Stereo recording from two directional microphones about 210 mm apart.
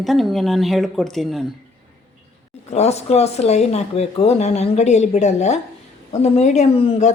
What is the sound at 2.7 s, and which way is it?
Speech, 30° left (ahead or behind).